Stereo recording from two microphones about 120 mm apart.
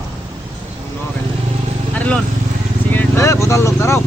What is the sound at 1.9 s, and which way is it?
Vehicle, 10° left (ahead or behind).